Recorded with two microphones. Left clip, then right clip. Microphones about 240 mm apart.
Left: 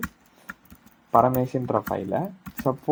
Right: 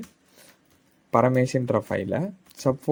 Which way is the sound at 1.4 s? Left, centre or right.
Right.